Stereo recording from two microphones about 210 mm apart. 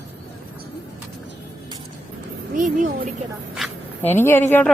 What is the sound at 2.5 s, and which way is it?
Speech, 35° right (ahead or behind).